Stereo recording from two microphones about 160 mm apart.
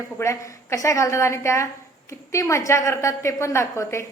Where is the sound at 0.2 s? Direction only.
20° left (ahead or behind).